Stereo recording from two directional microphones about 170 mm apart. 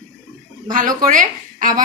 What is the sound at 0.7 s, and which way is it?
Speech, 55° right (ahead or behind).